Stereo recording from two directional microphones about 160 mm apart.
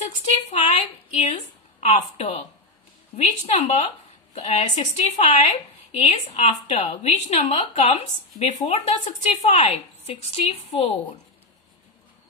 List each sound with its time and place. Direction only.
0.0 s a woman's voice: 45° left (ahead or behind)